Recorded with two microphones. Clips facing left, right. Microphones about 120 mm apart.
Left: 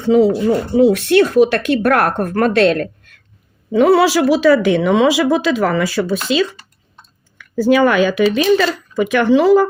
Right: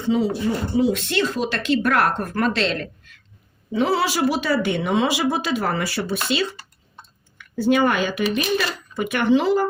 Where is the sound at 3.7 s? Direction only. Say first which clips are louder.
Left 9 dB; 65° left (ahead or behind); by 5.8 s 90° left.